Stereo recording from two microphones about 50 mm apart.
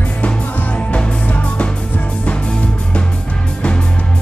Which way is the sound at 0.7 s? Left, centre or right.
Left.